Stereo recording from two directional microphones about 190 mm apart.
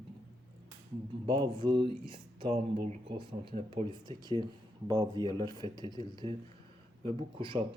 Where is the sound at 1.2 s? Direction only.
25° right (ahead or behind).